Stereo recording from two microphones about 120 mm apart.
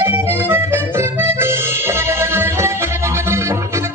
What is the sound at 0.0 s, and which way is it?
Accordion, 20° right (ahead or behind).